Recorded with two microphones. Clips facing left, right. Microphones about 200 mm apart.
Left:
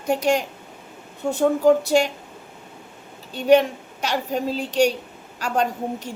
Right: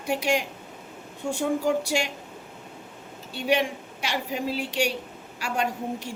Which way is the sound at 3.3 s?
40° left (ahead or behind).